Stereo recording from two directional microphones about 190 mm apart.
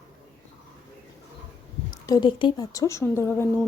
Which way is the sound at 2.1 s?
25° left (ahead or behind).